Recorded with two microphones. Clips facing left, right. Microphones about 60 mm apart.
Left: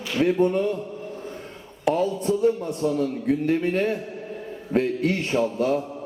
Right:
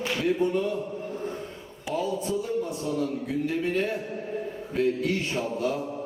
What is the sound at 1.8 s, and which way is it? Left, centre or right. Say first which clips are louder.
A man's voice: left 6 dB; left.